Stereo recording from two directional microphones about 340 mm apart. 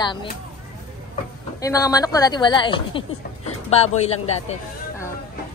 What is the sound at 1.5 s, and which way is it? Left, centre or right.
A man's voice, centre.